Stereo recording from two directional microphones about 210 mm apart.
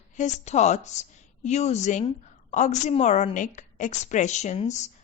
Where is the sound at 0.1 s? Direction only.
35° left (ahead or behind).